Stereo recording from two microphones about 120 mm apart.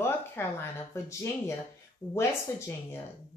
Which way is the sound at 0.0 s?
20° left (ahead or behind).